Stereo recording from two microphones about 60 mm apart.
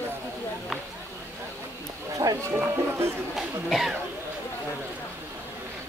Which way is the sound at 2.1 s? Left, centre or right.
Right.